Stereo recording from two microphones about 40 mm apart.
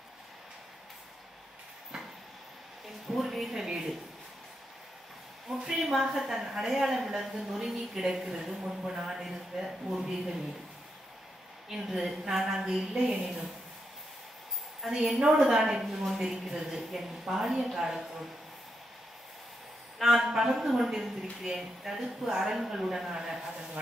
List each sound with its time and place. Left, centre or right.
3.1 s a woman's voice: centre
5.5 s a sound: centre
5.9 s a woman's voice: centre
11.7 s a woman's voice: centre
14.8 s a woman's voice: centre
15.1 s a woman's voice: centre
15.9 s a woman's voice: centre
20.0 s a woman's voice: centre